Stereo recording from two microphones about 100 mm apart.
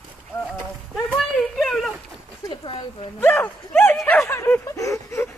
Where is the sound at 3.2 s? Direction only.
25° left (ahead or behind).